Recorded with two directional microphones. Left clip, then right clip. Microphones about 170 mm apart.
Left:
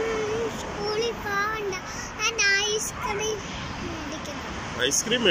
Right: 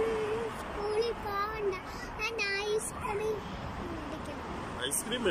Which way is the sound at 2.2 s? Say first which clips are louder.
Left 10 dB; 15° right (ahead or behind).